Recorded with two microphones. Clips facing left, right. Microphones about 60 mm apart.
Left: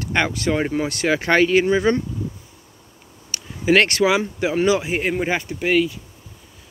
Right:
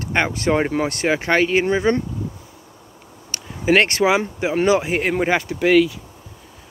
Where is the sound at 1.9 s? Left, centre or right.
Right.